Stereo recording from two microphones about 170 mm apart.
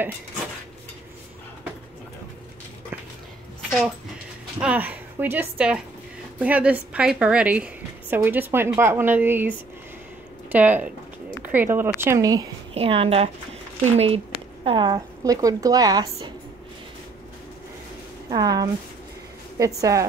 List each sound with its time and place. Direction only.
4.6 s a woman's voice: 10° right (ahead or behind)
10.5 s a woman's voice: 10° right (ahead or behind)
12.7 s a woman's voice: 35° right (ahead or behind)
18.3 s speech: 20° right (ahead or behind)